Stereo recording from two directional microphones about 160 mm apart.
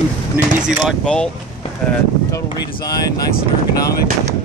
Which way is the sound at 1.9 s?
20° left (ahead or behind).